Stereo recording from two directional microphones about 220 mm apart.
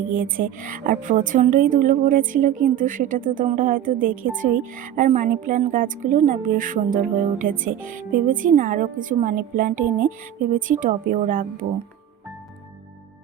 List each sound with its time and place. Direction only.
0.1 s a woman's voice: 40° right (ahead or behind)